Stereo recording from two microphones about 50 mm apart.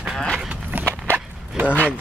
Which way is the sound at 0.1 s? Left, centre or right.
Centre.